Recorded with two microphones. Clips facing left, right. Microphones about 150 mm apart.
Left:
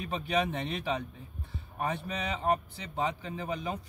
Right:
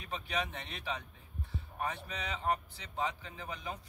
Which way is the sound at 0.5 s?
65° left (ahead or behind).